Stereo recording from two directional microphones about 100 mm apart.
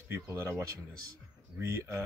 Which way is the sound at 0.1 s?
25° right (ahead or behind).